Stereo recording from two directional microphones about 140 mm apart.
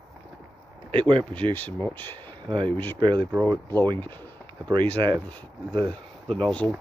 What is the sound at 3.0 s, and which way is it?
Speech, 35° right (ahead or behind).